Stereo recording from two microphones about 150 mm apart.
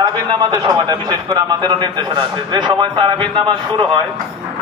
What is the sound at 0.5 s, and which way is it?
A man's voice, 25° right (ahead or behind).